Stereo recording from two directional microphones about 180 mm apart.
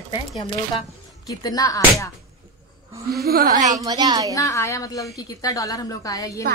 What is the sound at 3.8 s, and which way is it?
Speech, 20° right (ahead or behind).